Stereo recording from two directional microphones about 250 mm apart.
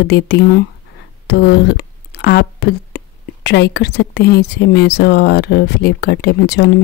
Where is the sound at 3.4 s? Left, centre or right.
Left.